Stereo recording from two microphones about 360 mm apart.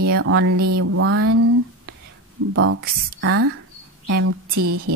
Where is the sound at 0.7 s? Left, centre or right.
Right.